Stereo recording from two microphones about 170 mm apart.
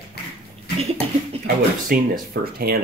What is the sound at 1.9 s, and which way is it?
Speech, 60° right (ahead or behind).